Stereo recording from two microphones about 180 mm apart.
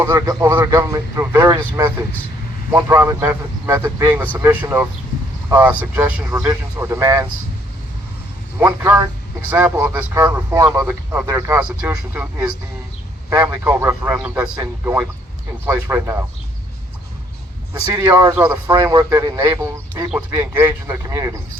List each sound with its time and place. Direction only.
0.0 s a man's voice: 20° right (ahead or behind)
8.5 s a man's voice: 10° right (ahead or behind)
14.6 s a man's voice: 20° right (ahead or behind)
17.9 s a man's voice: 15° right (ahead or behind)